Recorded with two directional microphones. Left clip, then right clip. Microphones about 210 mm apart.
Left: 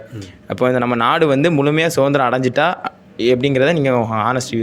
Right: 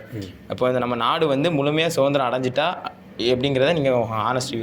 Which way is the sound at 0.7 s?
90° left.